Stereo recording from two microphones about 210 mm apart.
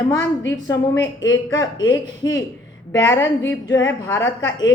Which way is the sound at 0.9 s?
60° left (ahead or behind).